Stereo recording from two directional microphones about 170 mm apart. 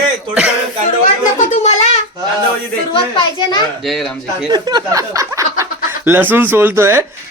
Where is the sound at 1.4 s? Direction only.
45° left (ahead or behind).